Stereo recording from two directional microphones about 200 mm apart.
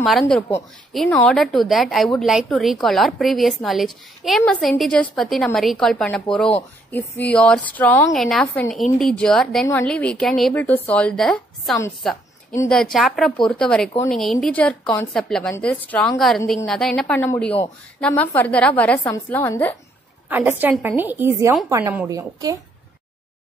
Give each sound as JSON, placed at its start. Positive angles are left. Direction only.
{"t": 0.0, "sound": "a woman's voice", "side_deg": 0}
{"t": 20.2, "sound": "a woman's voice", "side_deg": -10}